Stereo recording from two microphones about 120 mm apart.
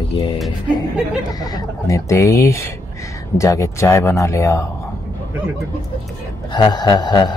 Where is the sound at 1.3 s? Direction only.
30° left (ahead or behind).